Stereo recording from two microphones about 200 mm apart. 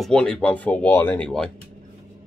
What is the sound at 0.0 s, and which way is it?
Speech, 5° left (ahead or behind).